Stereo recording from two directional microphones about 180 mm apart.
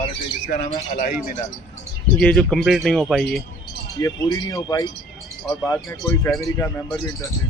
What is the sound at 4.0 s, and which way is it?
Speech, 20° left (ahead or behind).